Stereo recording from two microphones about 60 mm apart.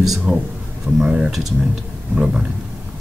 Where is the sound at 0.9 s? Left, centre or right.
Right.